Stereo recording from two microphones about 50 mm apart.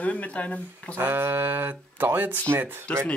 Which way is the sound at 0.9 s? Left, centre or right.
Right.